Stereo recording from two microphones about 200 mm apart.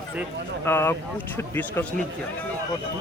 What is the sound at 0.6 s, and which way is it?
Speech, 10° left (ahead or behind).